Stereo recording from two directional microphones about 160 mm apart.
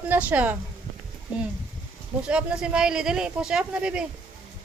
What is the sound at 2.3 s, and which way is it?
Speech, 5° right (ahead or behind).